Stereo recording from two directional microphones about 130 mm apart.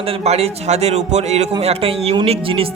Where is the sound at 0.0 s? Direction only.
50° right (ahead or behind).